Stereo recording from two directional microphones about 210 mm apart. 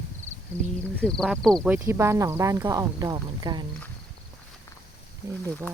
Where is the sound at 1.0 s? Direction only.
Centre (ahead or behind); by 3.6 s 20° right (ahead or behind).